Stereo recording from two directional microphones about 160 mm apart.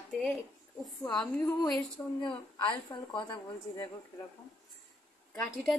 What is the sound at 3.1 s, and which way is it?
Speech, 30° left (ahead or behind).